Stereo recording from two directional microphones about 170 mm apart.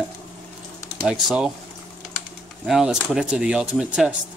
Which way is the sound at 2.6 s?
Centre (ahead or behind).